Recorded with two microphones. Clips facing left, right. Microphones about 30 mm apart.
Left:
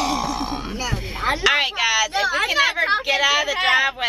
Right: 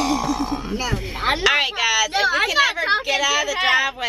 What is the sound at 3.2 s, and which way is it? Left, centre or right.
Speech, left.